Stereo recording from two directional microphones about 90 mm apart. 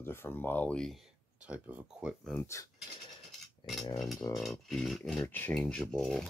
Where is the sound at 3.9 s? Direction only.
Centre (ahead or behind).